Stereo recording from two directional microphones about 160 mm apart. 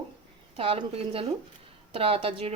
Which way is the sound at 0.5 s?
35° right (ahead or behind).